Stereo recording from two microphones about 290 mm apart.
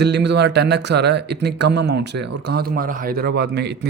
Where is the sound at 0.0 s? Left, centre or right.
Right.